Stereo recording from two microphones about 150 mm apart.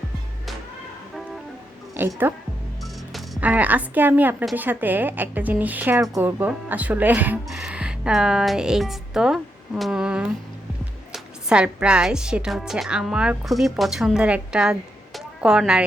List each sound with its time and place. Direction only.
2.0 s a woman's voice: 15° right (ahead or behind)
2.8 s music: centre (ahead or behind)
3.4 s a woman's voice: 10° right (ahead or behind)